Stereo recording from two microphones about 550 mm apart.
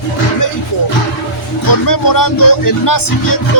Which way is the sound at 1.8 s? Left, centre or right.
Left.